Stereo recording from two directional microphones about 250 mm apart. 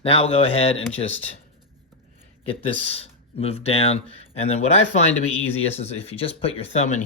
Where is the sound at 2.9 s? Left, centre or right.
Left.